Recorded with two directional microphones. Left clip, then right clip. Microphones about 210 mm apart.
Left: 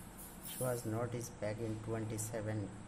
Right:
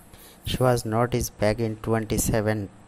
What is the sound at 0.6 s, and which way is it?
Speech, 40° right (ahead or behind).